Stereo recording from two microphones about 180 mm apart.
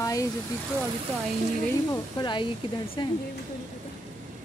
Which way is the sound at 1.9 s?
25° left (ahead or behind).